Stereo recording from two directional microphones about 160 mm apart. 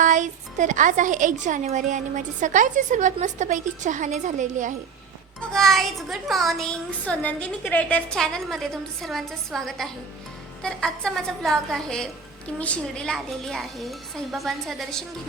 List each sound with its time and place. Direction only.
0.0 s a woman's voice: 50° right (ahead or behind)
5.4 s speech: centre (ahead or behind)